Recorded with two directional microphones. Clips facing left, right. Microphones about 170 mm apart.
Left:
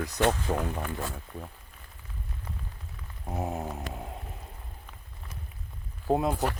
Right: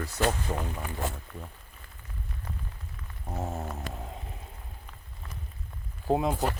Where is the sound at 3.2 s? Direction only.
15° left (ahead or behind).